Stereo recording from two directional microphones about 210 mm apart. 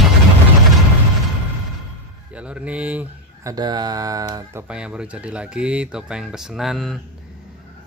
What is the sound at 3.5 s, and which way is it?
Speech, 20° right (ahead or behind).